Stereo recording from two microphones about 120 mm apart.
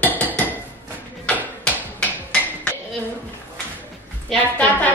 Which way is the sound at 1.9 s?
15° left (ahead or behind).